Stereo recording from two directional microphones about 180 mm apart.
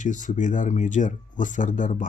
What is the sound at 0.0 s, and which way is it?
Speech, 45° left (ahead or behind).